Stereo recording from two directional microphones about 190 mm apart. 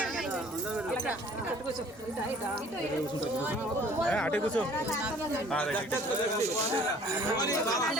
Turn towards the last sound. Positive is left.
turn(degrees=20)  # may be behind; listen again after turning